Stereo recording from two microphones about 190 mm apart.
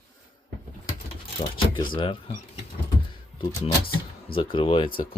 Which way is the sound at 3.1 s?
20° left (ahead or behind).